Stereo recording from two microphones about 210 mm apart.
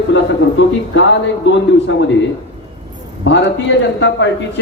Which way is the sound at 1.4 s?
55° left (ahead or behind).